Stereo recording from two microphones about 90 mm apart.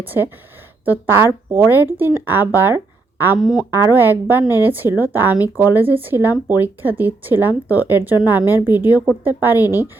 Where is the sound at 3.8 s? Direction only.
25° right (ahead or behind).